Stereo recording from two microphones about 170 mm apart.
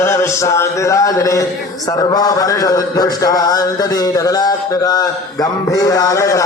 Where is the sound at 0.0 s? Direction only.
15° left (ahead or behind).